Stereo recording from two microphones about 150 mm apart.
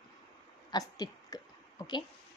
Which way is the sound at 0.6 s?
25° left (ahead or behind).